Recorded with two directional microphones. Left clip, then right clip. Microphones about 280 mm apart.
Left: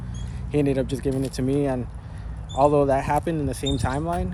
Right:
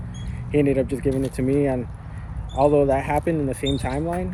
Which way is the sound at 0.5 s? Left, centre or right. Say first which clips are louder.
Right 3 dB; centre.